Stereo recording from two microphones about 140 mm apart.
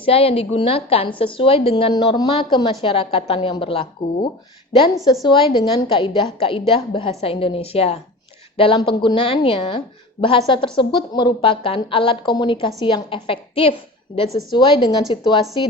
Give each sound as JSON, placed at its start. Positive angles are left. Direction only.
{"t": 0.0, "sound": "speech", "side_deg": 40}